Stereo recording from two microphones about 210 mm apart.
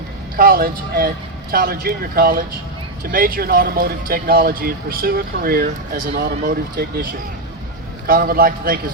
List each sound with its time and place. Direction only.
0.3 s speech: 45° right (ahead or behind)